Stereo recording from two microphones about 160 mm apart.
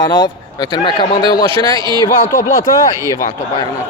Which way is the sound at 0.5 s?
25° left (ahead or behind).